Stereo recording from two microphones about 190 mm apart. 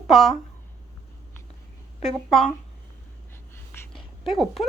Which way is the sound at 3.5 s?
15° left (ahead or behind).